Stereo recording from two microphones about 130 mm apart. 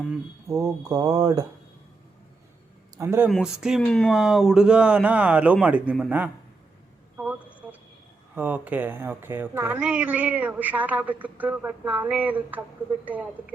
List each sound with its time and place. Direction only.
0.4 s speech: 25° right (ahead or behind)
3.0 s speech: 20° right (ahead or behind)
3.2 s speech: 5° right (ahead or behind)
3.8 s speech: 5° left (ahead or behind)
4.1 s a woman's voice: 5° right (ahead or behind)
7.2 s a sound: 10° right (ahead or behind)
8.4 s a woman's voice: 15° right (ahead or behind)